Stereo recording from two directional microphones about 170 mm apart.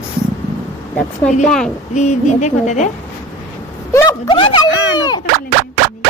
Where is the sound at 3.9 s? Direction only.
15° left (ahead or behind).